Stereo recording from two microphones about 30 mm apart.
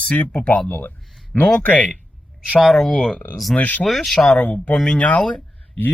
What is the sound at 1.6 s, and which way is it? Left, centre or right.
Speech, left.